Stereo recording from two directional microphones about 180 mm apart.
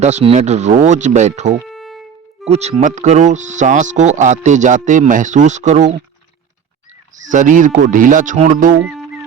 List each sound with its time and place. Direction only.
0.0 s speech: 40° right (ahead or behind)
1.6 s violin: centre (ahead or behind)
2.5 s speech: 35° right (ahead or behind)
7.3 s speech: 45° right (ahead or behind)
8.8 s music: centre (ahead or behind)